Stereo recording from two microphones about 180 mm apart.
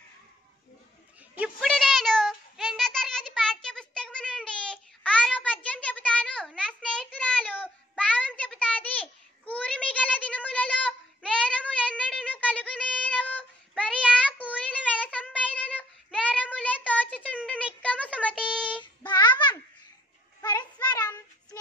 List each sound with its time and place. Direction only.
1.4 s a sound: centre (ahead or behind)
12.0 s child singing: 5° left (ahead or behind)
17.5 s a sound: 10° left (ahead or behind)
18.5 s child singing: 5° left (ahead or behind)
18.8 s child singing: 25° left (ahead or behind)
20.4 s child singing: 25° left (ahead or behind)